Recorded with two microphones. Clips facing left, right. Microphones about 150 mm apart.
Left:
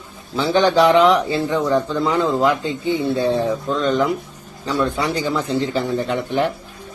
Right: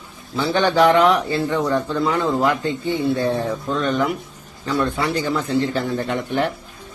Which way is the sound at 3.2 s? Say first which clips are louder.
Left 3 dB; 20° left (ahead or behind).